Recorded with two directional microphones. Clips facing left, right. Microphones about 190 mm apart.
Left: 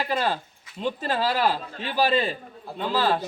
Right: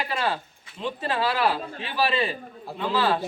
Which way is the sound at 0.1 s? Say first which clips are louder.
Left 2 dB; 40° left (ahead or behind).